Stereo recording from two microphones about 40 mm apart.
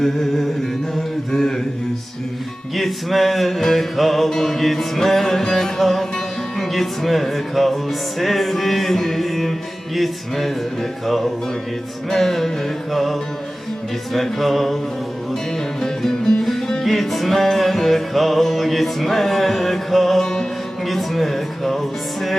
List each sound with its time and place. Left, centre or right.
1.3 s a sound: centre
2.7 s music: centre
15.8 s music: centre
20.2 s music: centre
20.8 s speech: centre